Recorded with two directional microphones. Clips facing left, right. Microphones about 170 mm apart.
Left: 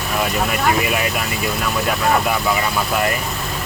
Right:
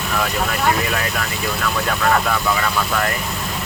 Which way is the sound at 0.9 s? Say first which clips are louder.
Left 2 dB; 15° left (ahead or behind).